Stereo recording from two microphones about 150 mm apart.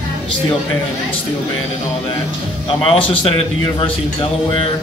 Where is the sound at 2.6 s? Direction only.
35° left (ahead or behind).